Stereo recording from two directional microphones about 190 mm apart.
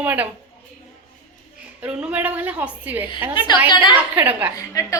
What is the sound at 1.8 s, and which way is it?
A woman's voice, 5° right (ahead or behind).